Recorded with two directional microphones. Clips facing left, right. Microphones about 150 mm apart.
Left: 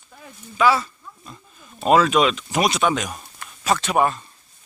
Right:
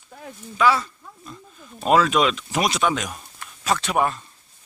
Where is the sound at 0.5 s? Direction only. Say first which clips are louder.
Left 1 dB; 5° left (ahead or behind).